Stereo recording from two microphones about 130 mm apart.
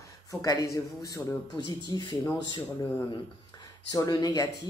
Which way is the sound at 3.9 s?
30° left (ahead or behind).